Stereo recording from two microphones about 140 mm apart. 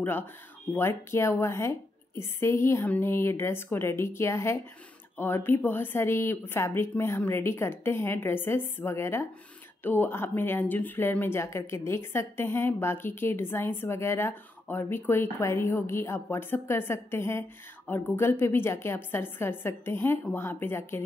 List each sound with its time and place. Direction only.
0.7 s speech: 20° left (ahead or behind)